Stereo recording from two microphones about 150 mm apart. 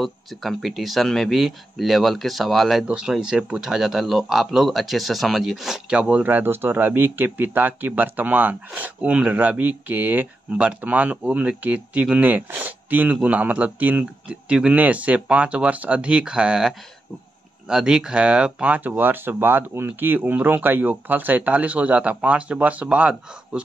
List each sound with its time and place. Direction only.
0.0 s speech: centre (ahead or behind)